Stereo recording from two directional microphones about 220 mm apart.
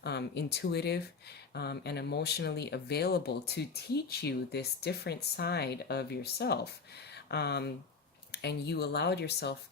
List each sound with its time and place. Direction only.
0.0 s speech: 50° left (ahead or behind)